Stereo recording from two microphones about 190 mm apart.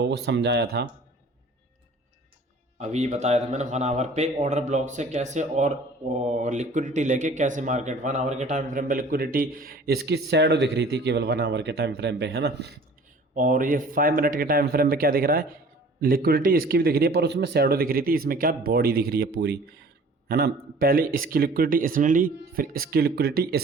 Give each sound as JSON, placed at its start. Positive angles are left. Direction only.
{"t": 0.0, "sound": "speech", "side_deg": -65}
{"t": 2.7, "sound": "speech", "side_deg": -35}
{"t": 13.3, "sound": "speech", "side_deg": -45}